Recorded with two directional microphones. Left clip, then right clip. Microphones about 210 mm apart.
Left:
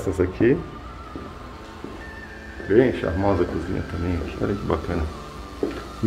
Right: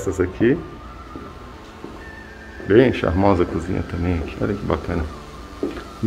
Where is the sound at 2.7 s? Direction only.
45° right (ahead or behind).